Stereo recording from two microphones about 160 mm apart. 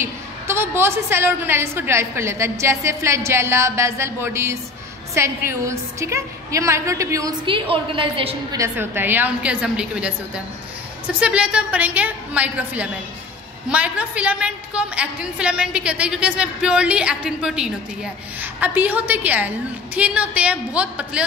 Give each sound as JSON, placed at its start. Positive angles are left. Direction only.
{"t": 0.0, "sound": "a woman's voice", "side_deg": -15}
{"t": 7.4, "sound": "a woman's voice", "side_deg": -35}
{"t": 8.5, "sound": "a woman's voice", "side_deg": -15}